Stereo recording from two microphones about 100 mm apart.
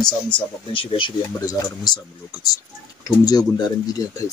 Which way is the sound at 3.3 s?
40° left (ahead or behind).